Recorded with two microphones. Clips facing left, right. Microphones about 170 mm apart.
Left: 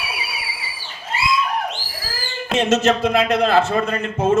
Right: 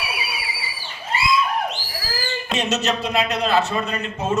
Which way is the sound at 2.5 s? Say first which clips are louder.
Left 7 dB; 50° left (ahead or behind).